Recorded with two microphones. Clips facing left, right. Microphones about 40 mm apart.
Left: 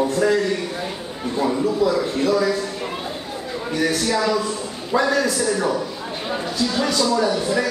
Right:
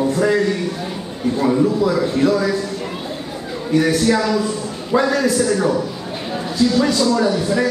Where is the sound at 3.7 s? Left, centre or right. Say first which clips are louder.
Right 6 dB; centre.